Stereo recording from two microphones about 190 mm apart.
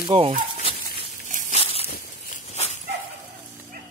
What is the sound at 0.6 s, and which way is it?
Dog, 30° left (ahead or behind).